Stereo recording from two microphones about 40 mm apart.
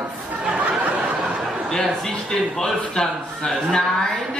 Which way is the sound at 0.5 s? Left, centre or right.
Right.